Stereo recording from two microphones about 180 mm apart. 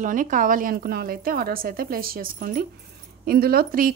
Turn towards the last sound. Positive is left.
turn(degrees=-55)  # may be behind; listen again after turning